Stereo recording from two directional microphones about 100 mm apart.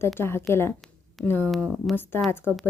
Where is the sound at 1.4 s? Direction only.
Centre (ahead or behind).